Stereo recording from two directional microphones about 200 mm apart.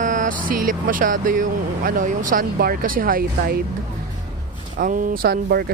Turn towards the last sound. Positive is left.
turn(degrees=-50)  # may be behind; listen again after turning